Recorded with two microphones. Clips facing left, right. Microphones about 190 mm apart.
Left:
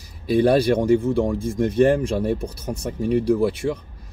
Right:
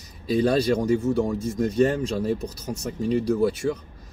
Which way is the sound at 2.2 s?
60° left (ahead or behind).